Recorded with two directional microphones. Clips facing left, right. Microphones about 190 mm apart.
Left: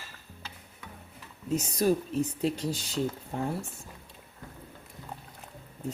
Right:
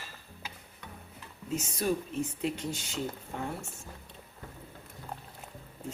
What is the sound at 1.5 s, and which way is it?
Speech, 40° left (ahead or behind).